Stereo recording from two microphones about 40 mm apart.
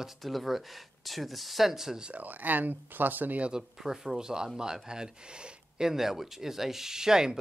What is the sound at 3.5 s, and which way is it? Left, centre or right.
Speech, centre.